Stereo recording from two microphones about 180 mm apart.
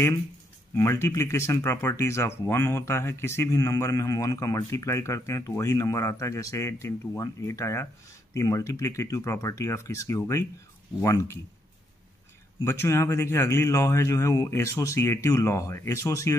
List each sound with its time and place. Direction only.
0.7 s speech: 15° left (ahead or behind)
12.6 s speech: 15° left (ahead or behind)